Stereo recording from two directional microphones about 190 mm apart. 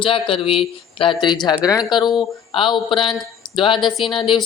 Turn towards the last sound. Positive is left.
turn(degrees=25)  # may be behind; listen again after turning